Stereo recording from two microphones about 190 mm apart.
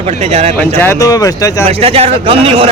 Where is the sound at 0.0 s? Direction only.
35° right (ahead or behind).